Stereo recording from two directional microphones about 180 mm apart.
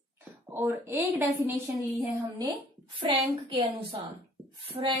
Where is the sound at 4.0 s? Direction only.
25° right (ahead or behind).